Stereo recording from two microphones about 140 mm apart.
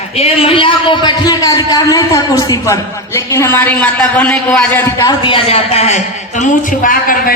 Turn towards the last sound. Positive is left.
turn(degrees=80)